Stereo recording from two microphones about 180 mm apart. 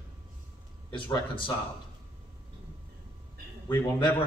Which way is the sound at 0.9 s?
30° left (ahead or behind).